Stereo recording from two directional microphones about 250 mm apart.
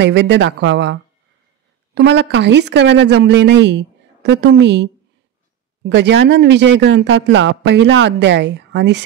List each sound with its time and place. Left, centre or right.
0.0 s speech: right
2.0 s speech: right